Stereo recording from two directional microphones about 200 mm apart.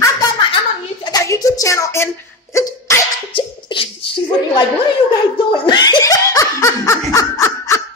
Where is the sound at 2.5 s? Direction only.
15° left (ahead or behind).